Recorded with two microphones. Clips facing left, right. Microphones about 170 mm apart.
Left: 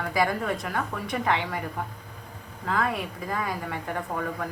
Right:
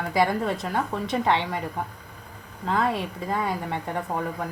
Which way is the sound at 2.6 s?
25° right (ahead or behind).